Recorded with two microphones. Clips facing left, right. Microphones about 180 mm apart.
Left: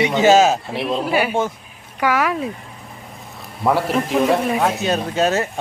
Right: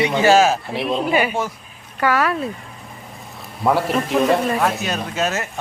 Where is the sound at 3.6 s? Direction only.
Centre (ahead or behind).